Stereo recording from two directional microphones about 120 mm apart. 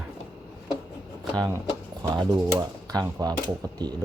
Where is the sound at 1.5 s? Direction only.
25° right (ahead or behind).